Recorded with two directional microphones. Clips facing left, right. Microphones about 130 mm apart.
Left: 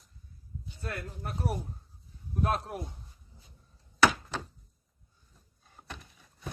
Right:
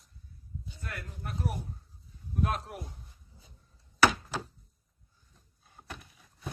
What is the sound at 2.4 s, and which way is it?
Speech, 35° left (ahead or behind).